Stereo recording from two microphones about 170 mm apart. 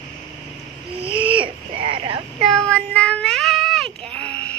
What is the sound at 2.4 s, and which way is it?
Child singing, 5° left (ahead or behind).